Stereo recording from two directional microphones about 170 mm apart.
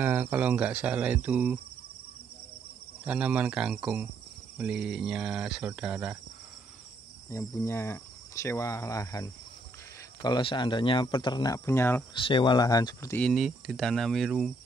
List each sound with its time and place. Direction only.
0.0 s cricket: 10° right (ahead or behind)
3.1 s cricket: 10° right (ahead or behind)
4.6 s speech: 5° right (ahead or behind)
7.2 s speech: 15° left (ahead or behind)
12.1 s speech: 30° left (ahead or behind)
13.2 s speech: centre (ahead or behind)